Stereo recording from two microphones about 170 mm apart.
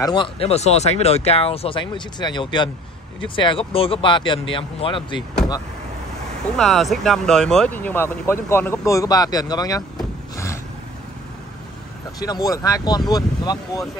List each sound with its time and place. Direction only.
0.0 s speech: 30° left (ahead or behind)
6.5 s speech: centre (ahead or behind); by 9.8 s 20° left (ahead or behind)
10.3 s a sound: 15° left (ahead or behind)
12.2 s speech: 20° left (ahead or behind)